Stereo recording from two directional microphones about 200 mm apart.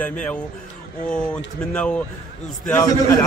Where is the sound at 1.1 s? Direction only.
5° left (ahead or behind).